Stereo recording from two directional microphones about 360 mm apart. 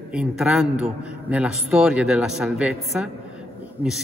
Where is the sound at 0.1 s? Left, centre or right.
Centre.